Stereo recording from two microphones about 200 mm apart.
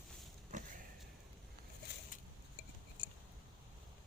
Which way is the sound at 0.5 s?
40° right (ahead or behind).